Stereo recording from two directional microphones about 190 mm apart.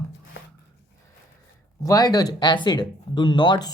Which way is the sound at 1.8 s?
20° left (ahead or behind).